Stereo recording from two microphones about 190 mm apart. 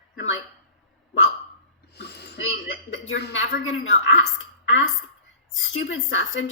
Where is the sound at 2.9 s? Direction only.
70° left (ahead or behind).